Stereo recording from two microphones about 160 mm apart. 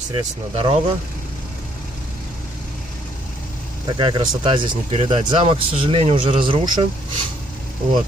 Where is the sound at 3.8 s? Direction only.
30° right (ahead or behind).